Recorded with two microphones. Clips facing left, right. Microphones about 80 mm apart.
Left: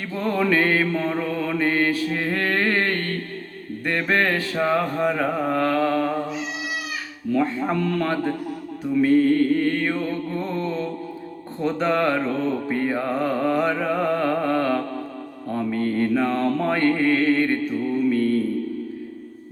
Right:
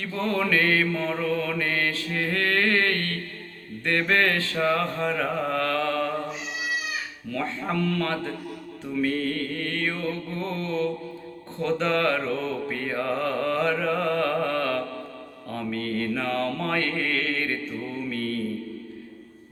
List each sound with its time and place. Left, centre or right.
0.1 s mantra: centre
7.3 s mantra: centre
18.1 s music: centre